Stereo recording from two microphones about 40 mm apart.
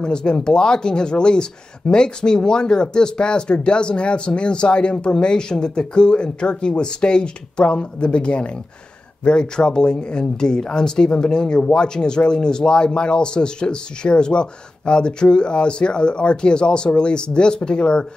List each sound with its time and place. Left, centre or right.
0.0 s speech: left